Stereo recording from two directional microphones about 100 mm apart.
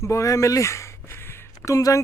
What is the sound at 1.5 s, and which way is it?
Speech, 35° left (ahead or behind).